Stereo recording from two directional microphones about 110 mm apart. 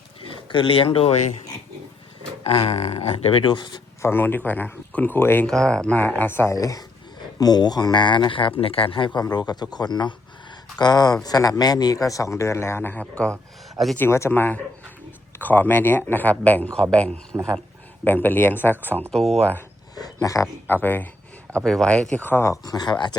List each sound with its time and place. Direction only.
0.3 s speech: 50° left (ahead or behind)
2.4 s speech: 65° left (ahead or behind); by 3.8 s 45° left (ahead or behind)
4.0 s speech: 20° left (ahead or behind)
5.5 s speech: 5° left (ahead or behind); by 9.0 s 55° left (ahead or behind)
9.1 s speech: 40° left (ahead or behind); by 19.6 s 15° left (ahead or behind)
20.0 s speech: 35° left (ahead or behind)
20.8 s speech: 15° left (ahead or behind)
21.6 s speech: 5° left (ahead or behind)
22.1 s speech: 15° left (ahead or behind)
22.6 s speech: 35° left (ahead or behind)